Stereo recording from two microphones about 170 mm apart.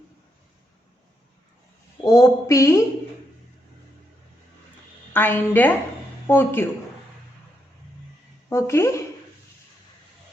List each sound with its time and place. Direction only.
2.0 s a woman's voice: 20° left (ahead or behind)
5.1 s a woman's voice: 10° left (ahead or behind)
8.4 s a woman's voice: 15° left (ahead or behind)